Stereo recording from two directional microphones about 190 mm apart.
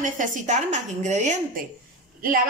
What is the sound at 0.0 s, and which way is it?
A woman's voice, 40° right (ahead or behind).